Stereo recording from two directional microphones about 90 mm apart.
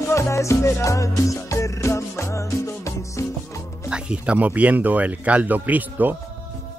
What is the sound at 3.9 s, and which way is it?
Speech, 10° right (ahead or behind).